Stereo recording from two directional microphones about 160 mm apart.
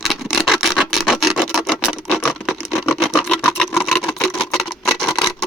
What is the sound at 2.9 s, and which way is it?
Sewing machine, centre (ahead or behind).